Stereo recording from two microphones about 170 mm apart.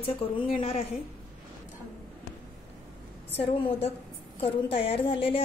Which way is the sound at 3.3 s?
35° left (ahead or behind).